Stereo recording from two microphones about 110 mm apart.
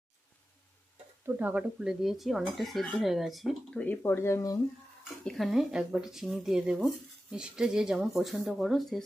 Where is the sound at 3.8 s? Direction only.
20° left (ahead or behind).